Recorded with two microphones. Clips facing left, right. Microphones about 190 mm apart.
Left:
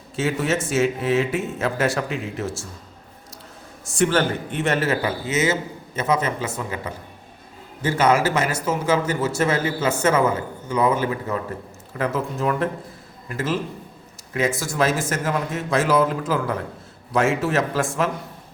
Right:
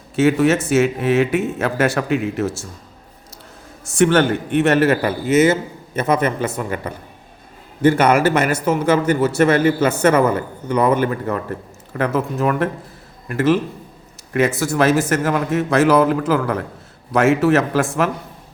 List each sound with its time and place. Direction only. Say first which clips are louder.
0.2 s speech: right 8 dB; 65° right (ahead or behind)
3.8 s a man's voice: right 5 dB; 65° right (ahead or behind)